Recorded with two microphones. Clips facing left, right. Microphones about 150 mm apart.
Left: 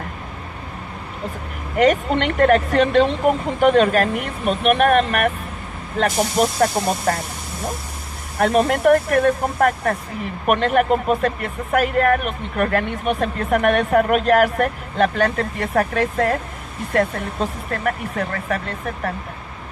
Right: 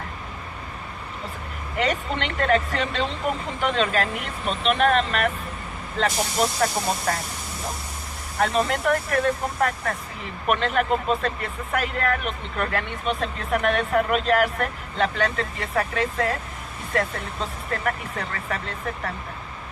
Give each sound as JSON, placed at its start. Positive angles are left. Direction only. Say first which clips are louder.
{"t": 1.7, "sound": "speech", "louder": "left 9 dB", "side_deg": 55}
{"t": 8.4, "sound": "speech", "louder": "left 6 dB", "side_deg": 55}